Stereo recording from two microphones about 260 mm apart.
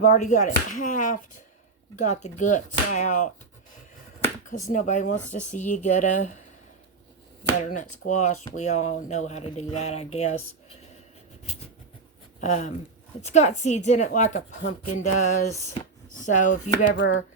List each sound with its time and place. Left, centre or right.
0.1 s speech: left
4.7 s speech: left
7.7 s speech: left
12.4 s speech: left
15.5 s speech: centre
16.1 s speech: left
16.9 s speech: left